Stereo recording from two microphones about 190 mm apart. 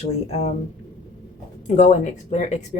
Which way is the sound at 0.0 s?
35° left (ahead or behind).